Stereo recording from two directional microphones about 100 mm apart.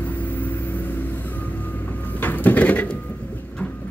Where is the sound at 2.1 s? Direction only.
20° left (ahead or behind).